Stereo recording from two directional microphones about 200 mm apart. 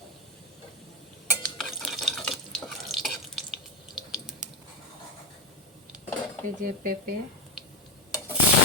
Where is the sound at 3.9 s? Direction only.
Centre (ahead or behind).